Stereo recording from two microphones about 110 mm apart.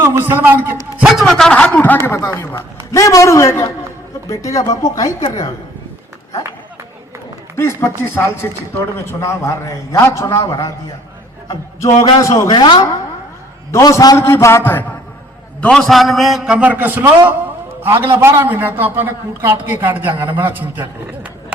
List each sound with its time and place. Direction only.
0.0 s a man's voice: 20° right (ahead or behind)
0.9 s a man's voice: centre (ahead or behind); by 5.1 s 30° left (ahead or behind)
7.5 s a man's voice: 25° left (ahead or behind)
12.0 s a man's voice: 35° left (ahead or behind)
13.7 s a man's voice: 25° left (ahead or behind)
14.2 s a man's voice: 25° left (ahead or behind)
15.6 s a man's voice: 5° left (ahead or behind); by 20.8 s 15° right (ahead or behind)